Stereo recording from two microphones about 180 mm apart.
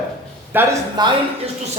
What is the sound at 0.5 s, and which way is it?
Speech, 10° right (ahead or behind).